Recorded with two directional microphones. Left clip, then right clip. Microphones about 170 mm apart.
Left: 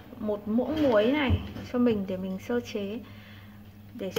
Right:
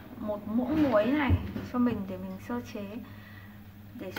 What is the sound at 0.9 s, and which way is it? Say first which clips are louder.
Speech: left 2 dB; 45° left (ahead or behind).